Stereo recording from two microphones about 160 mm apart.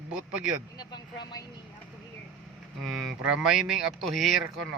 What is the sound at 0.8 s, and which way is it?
Speech, 25° left (ahead or behind).